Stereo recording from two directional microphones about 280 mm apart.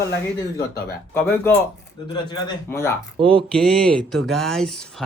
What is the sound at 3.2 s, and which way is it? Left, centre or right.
Speech, centre.